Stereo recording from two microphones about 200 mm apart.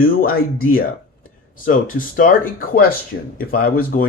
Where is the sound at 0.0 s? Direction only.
45° left (ahead or behind).